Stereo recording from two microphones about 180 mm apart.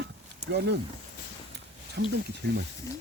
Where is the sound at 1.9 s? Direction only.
65° right (ahead or behind).